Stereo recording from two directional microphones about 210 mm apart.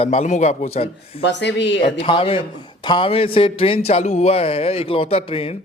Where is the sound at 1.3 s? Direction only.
55° left (ahead or behind).